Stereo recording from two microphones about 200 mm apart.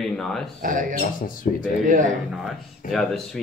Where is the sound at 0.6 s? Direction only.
40° right (ahead or behind).